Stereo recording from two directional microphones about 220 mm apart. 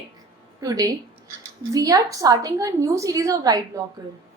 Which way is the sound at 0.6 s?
15° right (ahead or behind).